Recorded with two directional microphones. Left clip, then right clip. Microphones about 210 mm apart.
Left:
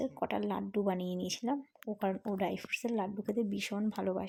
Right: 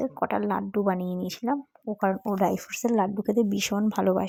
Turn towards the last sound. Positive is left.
turn(degrees=-30)  # may be behind; listen again after turning